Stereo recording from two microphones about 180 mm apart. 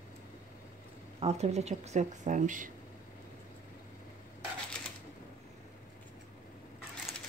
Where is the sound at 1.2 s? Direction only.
35° right (ahead or behind).